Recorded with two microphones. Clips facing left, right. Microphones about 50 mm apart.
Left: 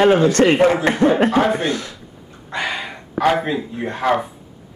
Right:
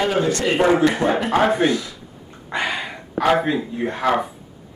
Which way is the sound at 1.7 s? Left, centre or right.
Left.